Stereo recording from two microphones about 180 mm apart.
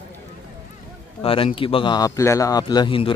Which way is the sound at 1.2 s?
30° left (ahead or behind).